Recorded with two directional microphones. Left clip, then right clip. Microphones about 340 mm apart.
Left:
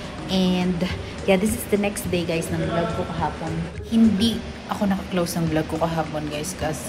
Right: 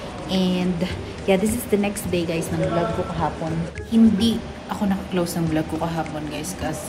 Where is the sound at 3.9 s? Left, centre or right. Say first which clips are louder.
Right 1 dB; centre.